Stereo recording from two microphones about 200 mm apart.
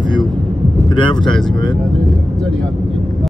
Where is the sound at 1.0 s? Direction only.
25° left (ahead or behind).